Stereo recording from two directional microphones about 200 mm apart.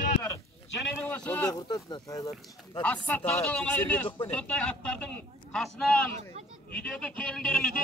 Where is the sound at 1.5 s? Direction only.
20° left (ahead or behind).